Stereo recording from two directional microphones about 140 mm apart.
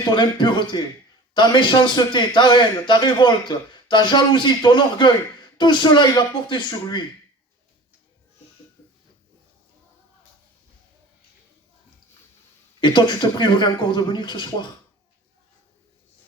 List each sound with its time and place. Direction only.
0.1 s a man's voice: 35° left (ahead or behind)
12.8 s a man's voice: 35° left (ahead or behind)